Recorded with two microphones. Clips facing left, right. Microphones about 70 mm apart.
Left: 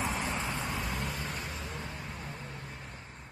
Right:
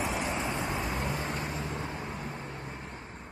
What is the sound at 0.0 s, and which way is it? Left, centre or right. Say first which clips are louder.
Vehicle: right 2 dB; centre.